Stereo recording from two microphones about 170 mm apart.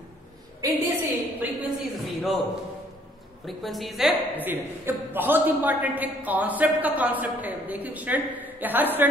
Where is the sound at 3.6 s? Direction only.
Centre (ahead or behind).